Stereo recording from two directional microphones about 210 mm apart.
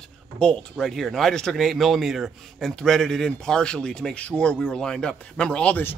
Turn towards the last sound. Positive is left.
turn(degrees=10)  # may be behind; listen again after turning